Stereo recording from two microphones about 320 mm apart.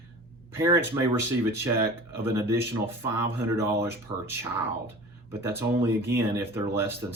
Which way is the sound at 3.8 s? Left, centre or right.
Centre.